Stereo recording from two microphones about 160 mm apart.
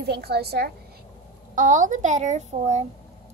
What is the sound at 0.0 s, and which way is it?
Speech, 85° right.